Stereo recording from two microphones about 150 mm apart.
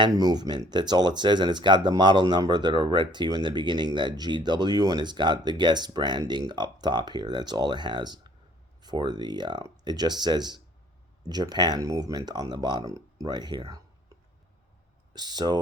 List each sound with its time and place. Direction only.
0.0 s speech: 25° right (ahead or behind)
15.1 s speech: 30° right (ahead or behind)